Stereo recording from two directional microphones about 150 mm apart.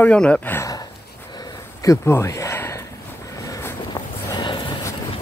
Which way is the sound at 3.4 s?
20° left (ahead or behind).